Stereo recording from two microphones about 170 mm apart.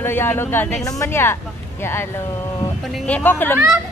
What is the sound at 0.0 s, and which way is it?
Speech, 15° left (ahead or behind).